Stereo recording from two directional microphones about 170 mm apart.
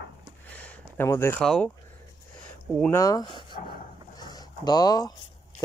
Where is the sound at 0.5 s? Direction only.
10° left (ahead or behind).